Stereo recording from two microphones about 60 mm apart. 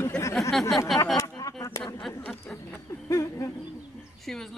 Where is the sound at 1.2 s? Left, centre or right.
Left.